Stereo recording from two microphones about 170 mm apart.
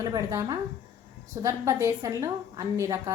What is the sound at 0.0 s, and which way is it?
A woman's voice, 20° right (ahead or behind).